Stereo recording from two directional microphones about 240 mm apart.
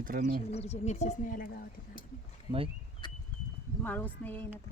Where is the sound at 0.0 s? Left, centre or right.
Right.